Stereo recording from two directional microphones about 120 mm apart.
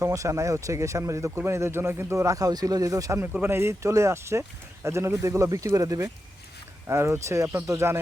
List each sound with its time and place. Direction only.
0.0 s speech: 25° right (ahead or behind)